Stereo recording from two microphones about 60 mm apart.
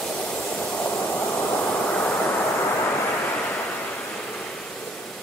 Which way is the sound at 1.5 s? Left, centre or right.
Left.